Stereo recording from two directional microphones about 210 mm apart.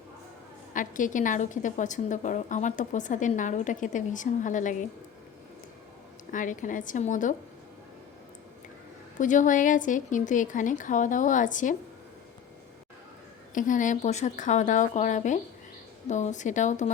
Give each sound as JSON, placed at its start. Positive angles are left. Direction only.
{"t": 0.7, "sound": "a woman's voice", "side_deg": 40}
{"t": 6.3, "sound": "a woman's voice", "side_deg": 40}
{"t": 9.1, "sound": "a woman's voice", "side_deg": 35}
{"t": 13.5, "sound": "a woman's voice", "side_deg": 40}